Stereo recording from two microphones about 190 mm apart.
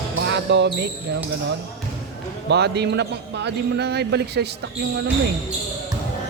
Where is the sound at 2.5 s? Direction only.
60° right (ahead or behind).